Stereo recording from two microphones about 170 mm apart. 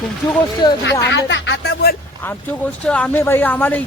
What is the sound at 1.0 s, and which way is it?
Speech, 90° left.